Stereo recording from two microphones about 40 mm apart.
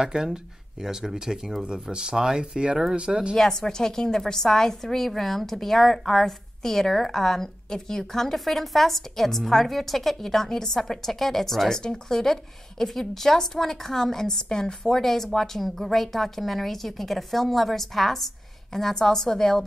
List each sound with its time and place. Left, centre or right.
0.0 s speech: centre
1.6 s speech: right
3.3 s a woman's voice: centre